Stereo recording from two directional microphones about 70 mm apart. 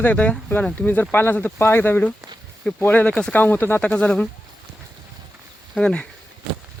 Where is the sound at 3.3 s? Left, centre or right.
Left.